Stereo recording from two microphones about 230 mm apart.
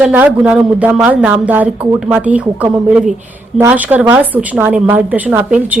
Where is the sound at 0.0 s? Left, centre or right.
Centre.